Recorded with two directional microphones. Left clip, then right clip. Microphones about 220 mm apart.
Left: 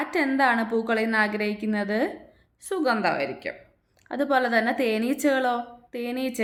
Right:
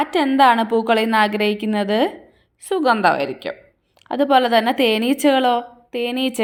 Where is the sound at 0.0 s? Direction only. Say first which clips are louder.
Right 8 dB; 25° right (ahead or behind).